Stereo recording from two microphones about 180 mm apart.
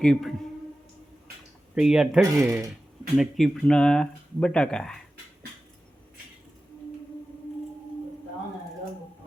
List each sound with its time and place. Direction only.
0.0 s speech: centre (ahead or behind)
1.7 s speech: 5° right (ahead or behind)
2.4 s speech: 15° right (ahead or behind)
3.2 s speech: centre (ahead or behind)